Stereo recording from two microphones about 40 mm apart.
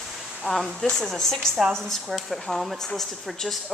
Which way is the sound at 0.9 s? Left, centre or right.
Centre.